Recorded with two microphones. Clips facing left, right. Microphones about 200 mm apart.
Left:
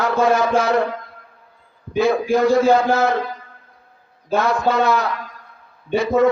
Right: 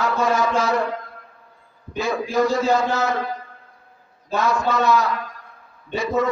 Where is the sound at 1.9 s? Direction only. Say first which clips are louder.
Left 5 dB; 60° left (ahead or behind).